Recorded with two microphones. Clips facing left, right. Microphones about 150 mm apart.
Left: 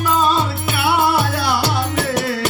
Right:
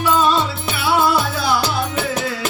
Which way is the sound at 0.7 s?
60° left (ahead or behind).